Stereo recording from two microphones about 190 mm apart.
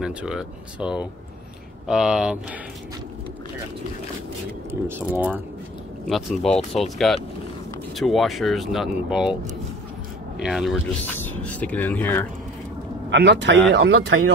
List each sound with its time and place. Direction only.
0.0 s speech: 5° right (ahead or behind)
4.6 s speech: 10° right (ahead or behind)
10.4 s speech: centre (ahead or behind)
13.1 s speech: 65° right (ahead or behind)